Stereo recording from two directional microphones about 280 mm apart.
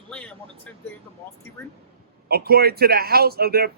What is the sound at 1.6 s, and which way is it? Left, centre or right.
Speech, centre.